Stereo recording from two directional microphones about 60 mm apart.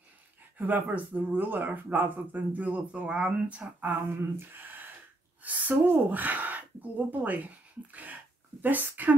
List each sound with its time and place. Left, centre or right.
0.6 s speech: right
4.4 s gasp: right
5.4 s speech: right